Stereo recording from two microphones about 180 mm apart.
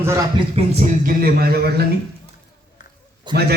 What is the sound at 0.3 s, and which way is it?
Speech, 35° right (ahead or behind).